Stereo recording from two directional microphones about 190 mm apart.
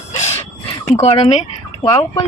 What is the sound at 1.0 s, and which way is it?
Speech, 35° left (ahead or behind).